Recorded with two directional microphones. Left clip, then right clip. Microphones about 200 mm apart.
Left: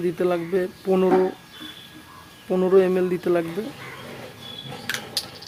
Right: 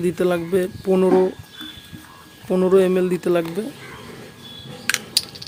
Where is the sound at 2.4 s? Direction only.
20° right (ahead or behind).